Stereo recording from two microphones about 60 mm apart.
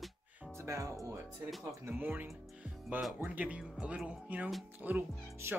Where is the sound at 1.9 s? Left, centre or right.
Right.